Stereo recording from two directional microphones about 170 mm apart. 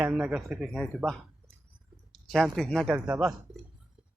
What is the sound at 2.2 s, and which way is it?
A man's voice, centre (ahead or behind).